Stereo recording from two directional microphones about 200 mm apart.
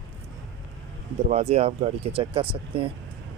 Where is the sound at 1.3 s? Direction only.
30° right (ahead or behind).